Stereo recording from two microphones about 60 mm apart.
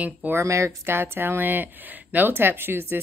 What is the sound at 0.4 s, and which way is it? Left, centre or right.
Speech, right.